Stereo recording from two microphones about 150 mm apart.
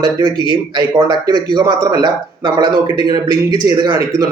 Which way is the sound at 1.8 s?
20° right (ahead or behind).